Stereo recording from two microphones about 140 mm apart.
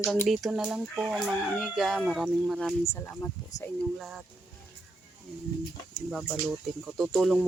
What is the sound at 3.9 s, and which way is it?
Speech, centre (ahead or behind).